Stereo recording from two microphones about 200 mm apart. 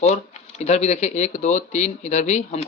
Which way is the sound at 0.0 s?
30° left (ahead or behind).